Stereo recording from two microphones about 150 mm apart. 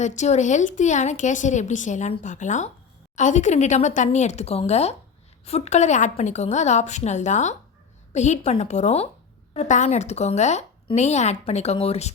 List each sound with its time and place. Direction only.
0.0 s a woman's voice: 50° left (ahead or behind)